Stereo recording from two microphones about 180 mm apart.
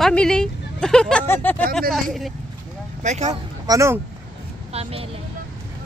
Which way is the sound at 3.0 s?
40° right (ahead or behind).